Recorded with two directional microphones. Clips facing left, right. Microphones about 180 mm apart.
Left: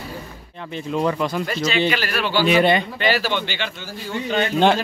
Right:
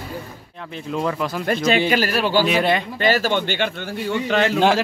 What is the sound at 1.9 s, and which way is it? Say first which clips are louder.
Speech: right 3 dB; 40° right (ahead or behind).